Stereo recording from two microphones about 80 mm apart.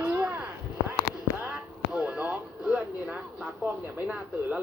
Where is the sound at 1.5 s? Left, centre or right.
Centre.